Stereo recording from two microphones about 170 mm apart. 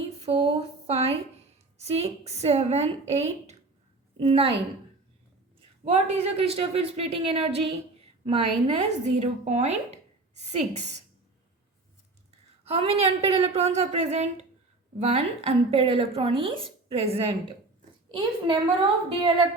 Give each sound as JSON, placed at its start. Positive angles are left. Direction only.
{"t": 0.2, "sound": "a sound", "side_deg": -35}
{"t": 1.8, "sound": "speech", "side_deg": -40}
{"t": 5.8, "sound": "speech", "side_deg": -35}
{"t": 12.6, "sound": "a child's voice", "side_deg": -35}